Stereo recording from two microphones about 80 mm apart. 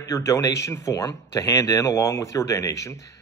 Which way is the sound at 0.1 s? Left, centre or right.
Left.